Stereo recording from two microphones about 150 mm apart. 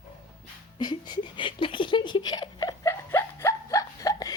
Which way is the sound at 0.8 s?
30° left (ahead or behind).